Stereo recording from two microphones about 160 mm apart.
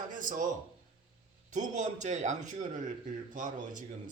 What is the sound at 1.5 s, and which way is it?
A man's voice, 50° right (ahead or behind).